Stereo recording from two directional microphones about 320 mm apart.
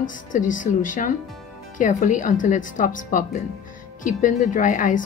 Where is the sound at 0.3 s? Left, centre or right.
Left.